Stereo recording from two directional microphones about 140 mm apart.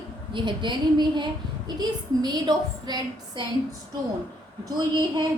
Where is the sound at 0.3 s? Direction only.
35° right (ahead or behind).